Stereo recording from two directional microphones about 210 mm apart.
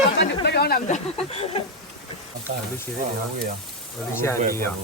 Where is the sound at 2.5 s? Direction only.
35° right (ahead or behind).